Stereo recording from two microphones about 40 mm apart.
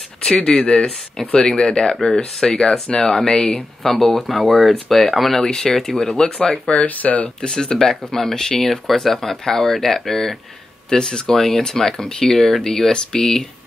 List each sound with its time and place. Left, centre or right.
0.6 s speech: centre
5.4 s speech: centre
6.1 s speech: left
6.7 s speech: left
7.4 s speech: centre